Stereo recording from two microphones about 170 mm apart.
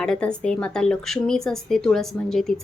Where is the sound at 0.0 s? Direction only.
5° left (ahead or behind).